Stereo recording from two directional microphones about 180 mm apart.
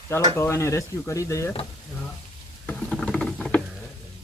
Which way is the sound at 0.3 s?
15° left (ahead or behind).